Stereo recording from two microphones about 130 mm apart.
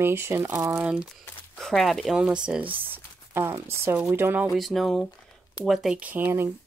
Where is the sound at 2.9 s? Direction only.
20° right (ahead or behind).